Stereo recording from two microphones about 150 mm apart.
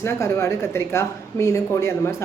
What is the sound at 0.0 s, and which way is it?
Speech, 20° left (ahead or behind).